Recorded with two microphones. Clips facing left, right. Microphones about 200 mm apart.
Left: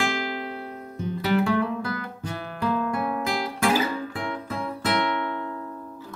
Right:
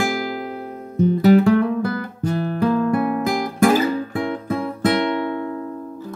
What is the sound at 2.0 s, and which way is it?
Guitar, 40° right (ahead or behind).